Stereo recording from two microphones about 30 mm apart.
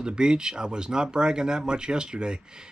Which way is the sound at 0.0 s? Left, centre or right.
Right.